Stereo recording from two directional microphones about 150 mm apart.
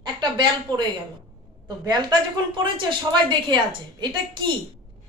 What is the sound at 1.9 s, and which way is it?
A woman's voice, 25° right (ahead or behind).